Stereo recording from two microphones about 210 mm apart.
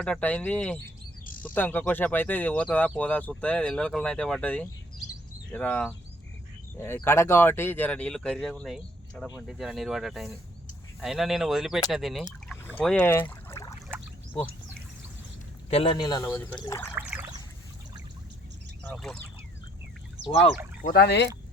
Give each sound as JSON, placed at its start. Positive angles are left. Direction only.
{"t": 0.0, "sound": "speech", "side_deg": 5}
{"t": 1.2, "sound": "bird", "side_deg": 40}
{"t": 1.5, "sound": "speech", "side_deg": 10}
{"t": 15.7, "sound": "speech", "side_deg": 25}
{"t": 16.9, "sound": "trickle", "side_deg": -5}
{"t": 18.8, "sound": "speech", "side_deg": 5}
{"t": 20.8, "sound": "speech", "side_deg": 50}